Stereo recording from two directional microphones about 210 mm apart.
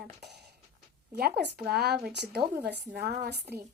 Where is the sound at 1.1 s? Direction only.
50° right (ahead or behind).